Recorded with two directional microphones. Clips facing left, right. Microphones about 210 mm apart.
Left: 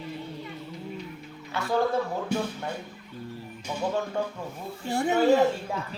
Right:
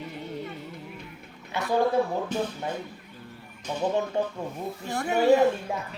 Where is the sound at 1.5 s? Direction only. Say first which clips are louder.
Right 1 dB; 20° right (ahead or behind).